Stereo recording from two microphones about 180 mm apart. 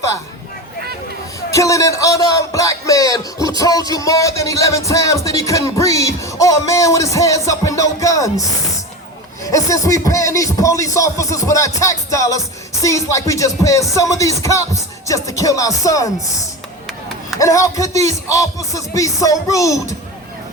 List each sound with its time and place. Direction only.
1.5 s speech: 15° left (ahead or behind)
17.4 s speech: 20° left (ahead or behind)